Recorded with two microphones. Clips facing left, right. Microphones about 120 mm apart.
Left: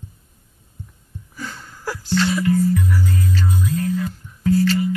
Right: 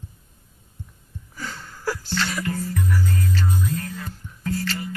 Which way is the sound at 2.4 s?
45° right (ahead or behind).